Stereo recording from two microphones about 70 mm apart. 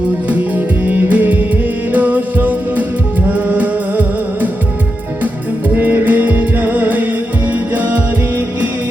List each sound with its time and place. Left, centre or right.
0.3 s music: right